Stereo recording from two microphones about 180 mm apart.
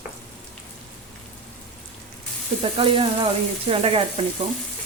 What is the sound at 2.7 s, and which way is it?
Speech, 30° right (ahead or behind).